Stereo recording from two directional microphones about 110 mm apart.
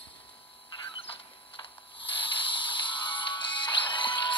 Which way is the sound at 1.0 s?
55° left (ahead or behind).